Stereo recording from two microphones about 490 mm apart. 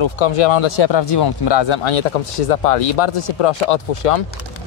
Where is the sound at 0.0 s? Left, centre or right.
Left.